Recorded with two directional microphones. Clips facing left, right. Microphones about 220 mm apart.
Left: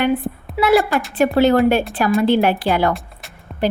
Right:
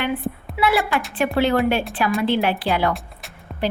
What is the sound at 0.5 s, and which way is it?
A woman's voice, 40° left (ahead or behind).